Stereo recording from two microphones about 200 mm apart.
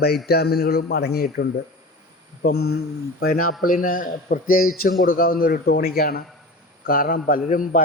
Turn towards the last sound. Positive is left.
turn(degrees=40)  # may be behind; listen again after turning